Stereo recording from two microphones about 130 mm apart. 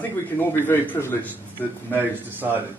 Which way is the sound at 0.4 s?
15° left (ahead or behind).